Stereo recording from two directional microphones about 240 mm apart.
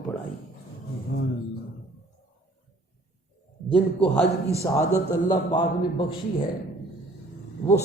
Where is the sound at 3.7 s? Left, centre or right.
Centre.